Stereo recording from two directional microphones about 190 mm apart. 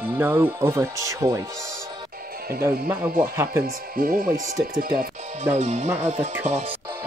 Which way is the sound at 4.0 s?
50° right (ahead or behind).